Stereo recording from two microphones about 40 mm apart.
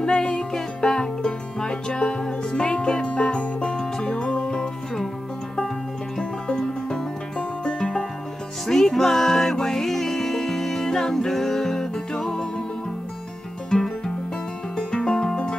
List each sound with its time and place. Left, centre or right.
0.0 s music: left
6.1 s music: centre
8.6 s music: centre
13.7 s music: centre